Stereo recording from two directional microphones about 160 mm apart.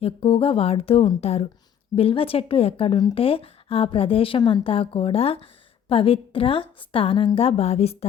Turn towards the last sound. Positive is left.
turn(degrees=40)  # may be behind; listen again after turning